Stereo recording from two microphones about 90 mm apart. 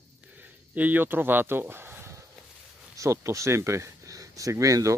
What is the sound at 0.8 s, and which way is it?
Speech, 20° right (ahead or behind).